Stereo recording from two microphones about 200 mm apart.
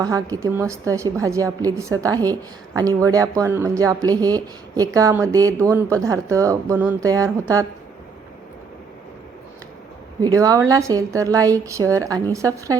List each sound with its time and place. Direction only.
0.0 s a woman's voice: 15° right (ahead or behind)
10.2 s a woman's voice: 20° right (ahead or behind)